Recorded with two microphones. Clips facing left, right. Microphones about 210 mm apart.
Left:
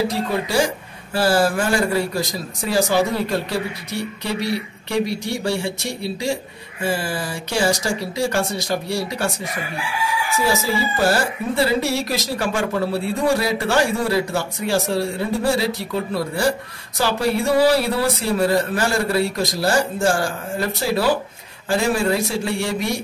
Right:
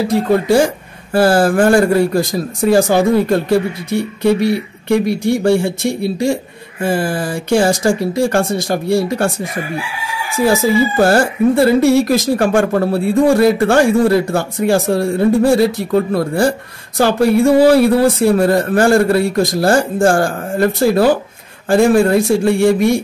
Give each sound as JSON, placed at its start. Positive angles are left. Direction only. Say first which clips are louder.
{"t": 0.1, "sound": "speech", "louder": "right 9 dB", "side_deg": -50}
{"t": 10.4, "sound": "speech", "louder": "right 10 dB", "side_deg": -50}